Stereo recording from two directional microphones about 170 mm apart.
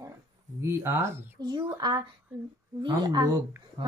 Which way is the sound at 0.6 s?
15° right (ahead or behind).